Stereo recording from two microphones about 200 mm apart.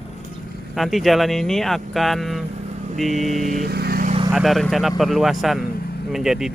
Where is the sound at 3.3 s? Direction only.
40° right (ahead or behind).